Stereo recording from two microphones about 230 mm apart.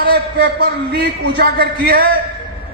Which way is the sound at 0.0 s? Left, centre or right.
Right.